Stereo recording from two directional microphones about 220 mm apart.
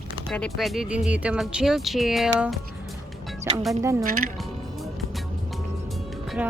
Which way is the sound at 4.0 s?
40° right (ahead or behind).